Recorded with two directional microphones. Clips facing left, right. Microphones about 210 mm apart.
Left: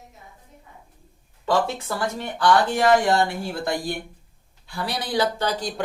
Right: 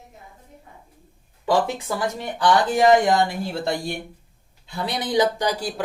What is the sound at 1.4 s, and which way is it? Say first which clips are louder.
A man's voice: right 1 dB; 15° right (ahead or behind).